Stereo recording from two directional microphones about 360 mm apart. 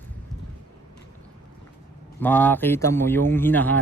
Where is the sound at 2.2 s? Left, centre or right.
Centre.